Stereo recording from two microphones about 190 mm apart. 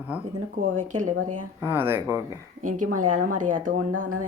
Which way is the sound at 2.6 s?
45° right (ahead or behind).